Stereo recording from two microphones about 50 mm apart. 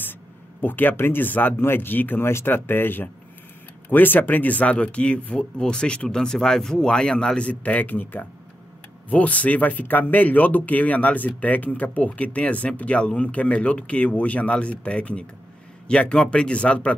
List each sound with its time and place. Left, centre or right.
0.6 s speech: left
9.1 s speech: left